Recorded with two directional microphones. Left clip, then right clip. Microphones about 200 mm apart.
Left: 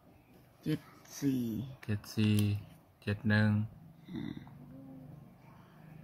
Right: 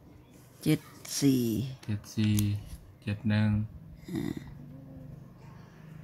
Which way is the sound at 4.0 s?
45° right (ahead or behind).